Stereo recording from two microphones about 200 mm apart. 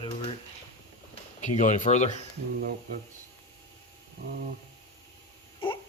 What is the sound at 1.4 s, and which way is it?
Speech, 35° left (ahead or behind).